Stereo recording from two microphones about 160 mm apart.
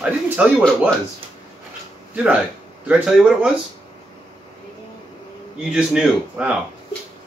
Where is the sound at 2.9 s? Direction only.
5° right (ahead or behind).